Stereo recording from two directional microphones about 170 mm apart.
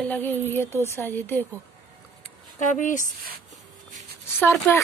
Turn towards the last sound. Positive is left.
turn(degrees=15)  # may be behind; listen again after turning